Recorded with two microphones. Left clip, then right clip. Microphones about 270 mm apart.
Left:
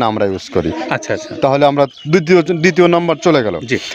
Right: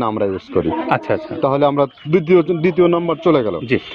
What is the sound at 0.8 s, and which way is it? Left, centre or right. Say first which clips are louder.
Speech: right 1 dB; centre.